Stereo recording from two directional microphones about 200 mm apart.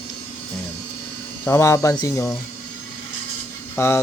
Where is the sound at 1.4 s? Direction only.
15° left (ahead or behind).